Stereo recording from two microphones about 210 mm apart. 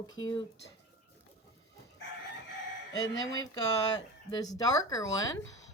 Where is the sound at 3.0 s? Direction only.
15° left (ahead or behind).